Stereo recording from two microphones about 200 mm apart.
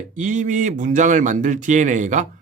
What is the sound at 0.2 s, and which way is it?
Speech, 40° right (ahead or behind).